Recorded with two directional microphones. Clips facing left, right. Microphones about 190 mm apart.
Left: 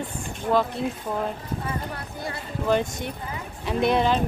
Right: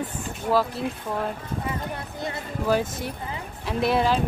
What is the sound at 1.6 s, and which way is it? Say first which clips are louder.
Clip-clop: right 1 dB; 20° right (ahead or behind).